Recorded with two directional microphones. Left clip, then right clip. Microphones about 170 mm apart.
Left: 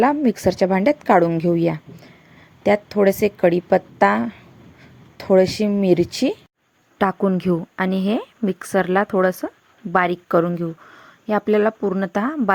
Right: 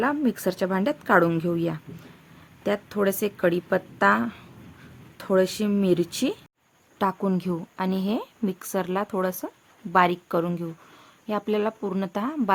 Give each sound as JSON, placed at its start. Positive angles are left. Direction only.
{"t": 0.0, "sound": "speech", "side_deg": 20}